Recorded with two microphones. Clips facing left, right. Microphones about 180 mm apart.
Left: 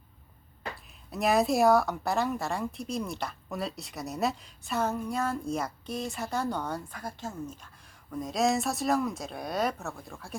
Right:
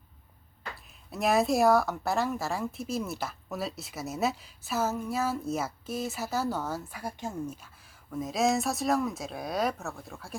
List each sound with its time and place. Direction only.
0.8 s speech: centre (ahead or behind)